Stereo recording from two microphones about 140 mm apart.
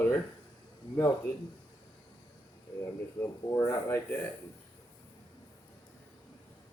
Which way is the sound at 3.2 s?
20° left (ahead or behind).